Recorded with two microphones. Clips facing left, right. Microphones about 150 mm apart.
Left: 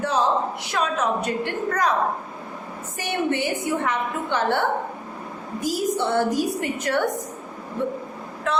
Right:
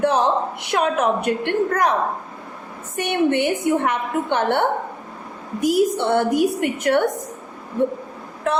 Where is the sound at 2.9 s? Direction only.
60° right (ahead or behind).